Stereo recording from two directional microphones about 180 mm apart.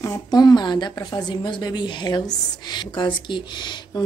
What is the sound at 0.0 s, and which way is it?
A woman's voice, 20° left (ahead or behind).